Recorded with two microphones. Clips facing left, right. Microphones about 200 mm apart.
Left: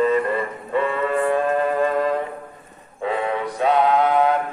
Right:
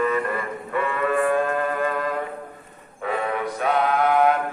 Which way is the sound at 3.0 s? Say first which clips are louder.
Left 2 dB; 25° left (ahead or behind).